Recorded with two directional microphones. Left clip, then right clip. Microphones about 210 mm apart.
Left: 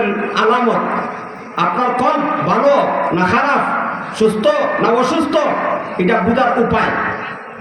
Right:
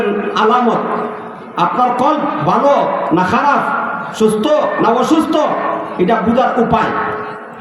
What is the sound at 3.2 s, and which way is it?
A man's voice, 60° right (ahead or behind).